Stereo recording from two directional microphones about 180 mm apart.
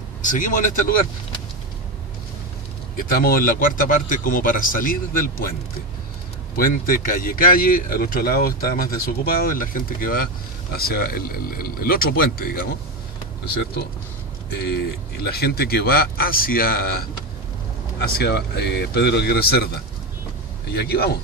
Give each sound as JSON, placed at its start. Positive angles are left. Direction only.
{"t": 0.2, "sound": "speech", "side_deg": 45}
{"t": 3.2, "sound": "speech", "side_deg": 55}
{"t": 6.5, "sound": "a man's voice", "side_deg": 50}
{"t": 14.5, "sound": "a man's voice", "side_deg": 60}
{"t": 18.0, "sound": "a man's voice", "side_deg": 65}
{"t": 20.7, "sound": "a man's voice", "side_deg": 60}